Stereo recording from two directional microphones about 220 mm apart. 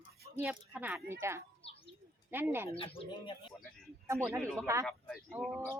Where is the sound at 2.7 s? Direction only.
25° left (ahead or behind).